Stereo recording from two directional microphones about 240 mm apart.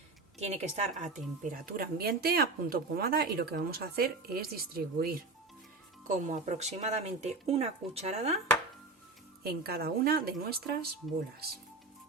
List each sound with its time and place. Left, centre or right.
0.3 s speech: right
9.4 s speech: right